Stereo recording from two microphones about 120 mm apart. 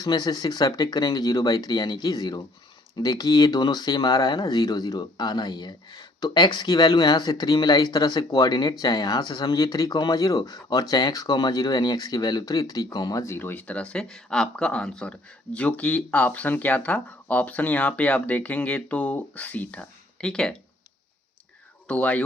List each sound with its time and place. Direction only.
0.0 s speech: 35° left (ahead or behind); by 20.6 s 5° left (ahead or behind)
21.8 s speech: 10° left (ahead or behind)